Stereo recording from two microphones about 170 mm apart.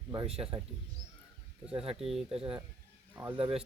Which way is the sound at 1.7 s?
35° right (ahead or behind).